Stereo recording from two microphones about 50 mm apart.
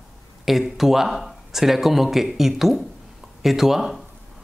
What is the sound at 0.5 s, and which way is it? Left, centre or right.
Speech, centre.